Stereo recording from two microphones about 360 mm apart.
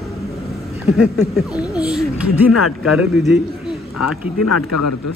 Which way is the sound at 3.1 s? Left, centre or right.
Centre.